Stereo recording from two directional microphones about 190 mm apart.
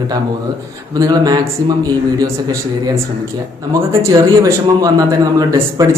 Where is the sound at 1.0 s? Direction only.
20° right (ahead or behind).